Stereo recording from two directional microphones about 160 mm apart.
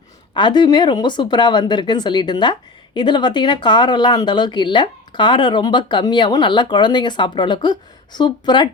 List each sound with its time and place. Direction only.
0.3 s speech: 30° left (ahead or behind)